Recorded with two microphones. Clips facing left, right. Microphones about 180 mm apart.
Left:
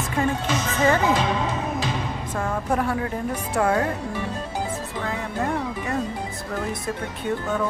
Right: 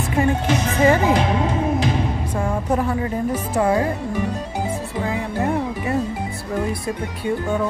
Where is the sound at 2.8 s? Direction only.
Centre (ahead or behind).